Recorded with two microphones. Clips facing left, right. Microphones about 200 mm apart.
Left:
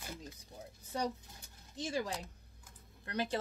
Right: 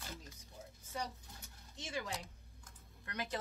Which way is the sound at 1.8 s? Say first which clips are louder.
Left 6 dB; 35° left (ahead or behind).